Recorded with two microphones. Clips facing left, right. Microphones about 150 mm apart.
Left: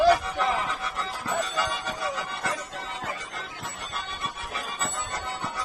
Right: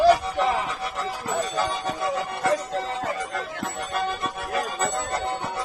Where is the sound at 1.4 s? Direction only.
45° right (ahead or behind).